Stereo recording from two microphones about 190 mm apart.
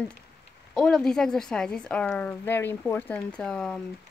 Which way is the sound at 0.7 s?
5° left (ahead or behind).